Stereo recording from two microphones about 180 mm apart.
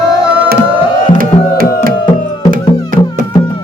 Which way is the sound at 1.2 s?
50° right (ahead or behind).